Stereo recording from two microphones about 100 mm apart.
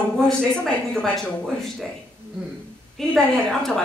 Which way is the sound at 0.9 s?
10° left (ahead or behind).